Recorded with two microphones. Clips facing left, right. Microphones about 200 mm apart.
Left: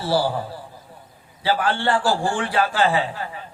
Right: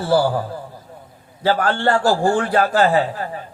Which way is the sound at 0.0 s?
50° right (ahead or behind).